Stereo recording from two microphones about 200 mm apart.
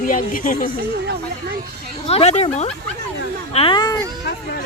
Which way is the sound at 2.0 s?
30° left (ahead or behind).